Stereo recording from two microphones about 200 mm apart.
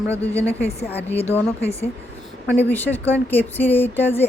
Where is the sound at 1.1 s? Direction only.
30° left (ahead or behind).